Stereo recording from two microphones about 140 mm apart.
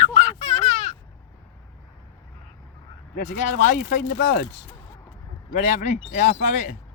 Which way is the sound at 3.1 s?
85° left.